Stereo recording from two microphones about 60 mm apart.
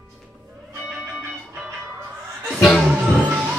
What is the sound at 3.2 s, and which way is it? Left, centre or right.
Music, right.